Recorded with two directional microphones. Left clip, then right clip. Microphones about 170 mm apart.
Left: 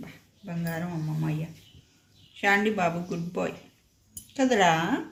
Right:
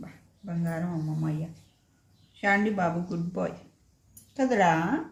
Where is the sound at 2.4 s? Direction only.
10° left (ahead or behind).